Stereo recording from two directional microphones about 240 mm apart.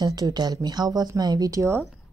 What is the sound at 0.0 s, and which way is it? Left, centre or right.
Speech, centre.